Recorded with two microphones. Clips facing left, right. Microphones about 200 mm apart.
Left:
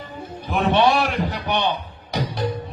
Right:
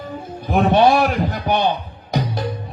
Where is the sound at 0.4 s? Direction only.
40° right (ahead or behind).